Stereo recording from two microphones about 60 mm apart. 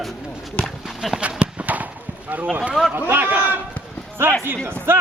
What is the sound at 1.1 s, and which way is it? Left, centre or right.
Clip-clop, right.